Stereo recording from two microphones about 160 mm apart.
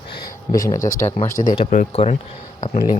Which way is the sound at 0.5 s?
20° left (ahead or behind).